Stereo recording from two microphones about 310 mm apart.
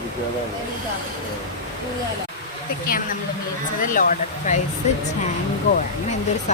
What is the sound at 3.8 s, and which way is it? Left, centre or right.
Speech, left.